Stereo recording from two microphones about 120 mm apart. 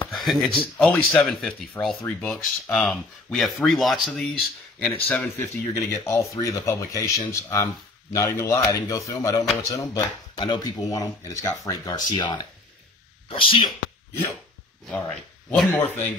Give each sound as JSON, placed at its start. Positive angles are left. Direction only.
{"t": 0.1, "sound": "a sound", "side_deg": 0}
{"t": 0.6, "sound": "speech", "side_deg": 10}
{"t": 5.9, "sound": "speech", "side_deg": 25}
{"t": 10.3, "sound": "speech", "side_deg": 40}
{"t": 11.9, "sound": "speech", "side_deg": 40}
{"t": 14.9, "sound": "speech", "side_deg": 5}
{"t": 15.7, "sound": "speech", "side_deg": 15}